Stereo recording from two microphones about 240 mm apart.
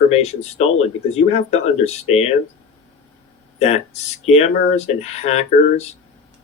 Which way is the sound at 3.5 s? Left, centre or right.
Left.